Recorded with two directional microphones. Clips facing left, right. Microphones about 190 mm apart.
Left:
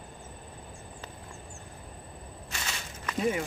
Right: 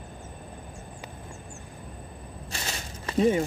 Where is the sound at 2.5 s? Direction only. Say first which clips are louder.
Right 3 dB; 30° right (ahead or behind).